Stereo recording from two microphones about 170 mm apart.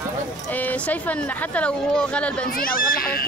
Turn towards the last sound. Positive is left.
turn(degrees=60)  # may be behind; listen again after turning